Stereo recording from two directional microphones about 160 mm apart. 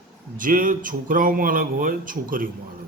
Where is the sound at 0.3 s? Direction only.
60° right (ahead or behind).